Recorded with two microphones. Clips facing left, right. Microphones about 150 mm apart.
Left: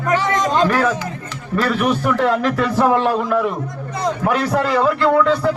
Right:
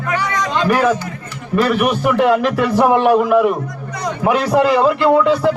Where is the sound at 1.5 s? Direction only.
15° right (ahead or behind).